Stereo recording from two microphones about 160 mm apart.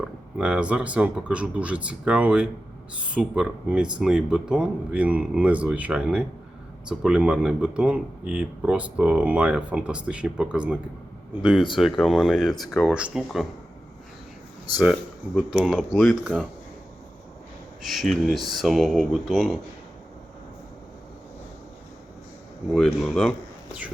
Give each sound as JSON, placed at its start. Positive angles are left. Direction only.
{"t": 0.0, "sound": "speech", "side_deg": -5}
{"t": 11.8, "sound": "speech", "side_deg": 0}
{"t": 15.4, "sound": "speech", "side_deg": -5}
{"t": 17.8, "sound": "speech", "side_deg": 0}
{"t": 22.7, "sound": "speech", "side_deg": 0}